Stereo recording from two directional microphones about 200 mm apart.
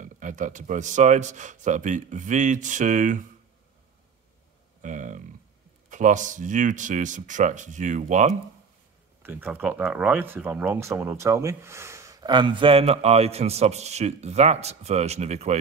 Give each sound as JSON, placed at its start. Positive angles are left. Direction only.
{"t": 0.0, "sound": "speech", "side_deg": -40}
{"t": 4.8, "sound": "a sound", "side_deg": -40}
{"t": 5.9, "sound": "speech", "side_deg": -40}
{"t": 9.2, "sound": "speech", "side_deg": -10}